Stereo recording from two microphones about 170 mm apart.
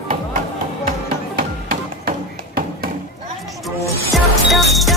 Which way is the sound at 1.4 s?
60° right (ahead or behind).